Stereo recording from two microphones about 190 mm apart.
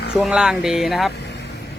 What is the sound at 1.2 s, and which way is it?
Vehicle, 60° left (ahead or behind).